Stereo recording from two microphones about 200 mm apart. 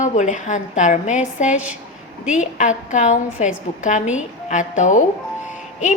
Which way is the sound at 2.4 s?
40° left (ahead or behind).